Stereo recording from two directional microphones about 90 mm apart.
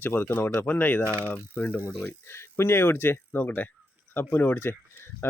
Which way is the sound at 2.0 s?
30° left (ahead or behind).